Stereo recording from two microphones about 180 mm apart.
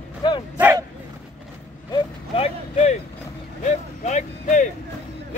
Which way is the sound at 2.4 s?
35° left (ahead or behind).